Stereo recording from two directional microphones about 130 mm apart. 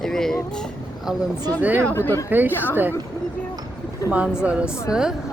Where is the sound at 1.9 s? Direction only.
20° left (ahead or behind).